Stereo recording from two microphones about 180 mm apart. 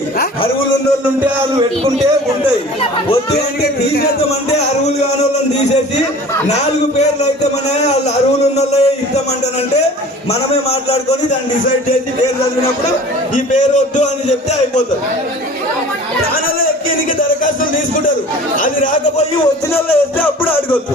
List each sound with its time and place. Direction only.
3.3 s speech: 65° left (ahead or behind)
4.3 s speech: 35° left (ahead or behind)
8.5 s a sound: 35° left (ahead or behind)
10.5 s a sound: 35° left (ahead or behind)
13.3 s a man's voice: 45° left (ahead or behind)
17.4 s music: 50° left (ahead or behind)
18.6 s speech: 50° left (ahead or behind)
19.7 s music: 10° left (ahead or behind)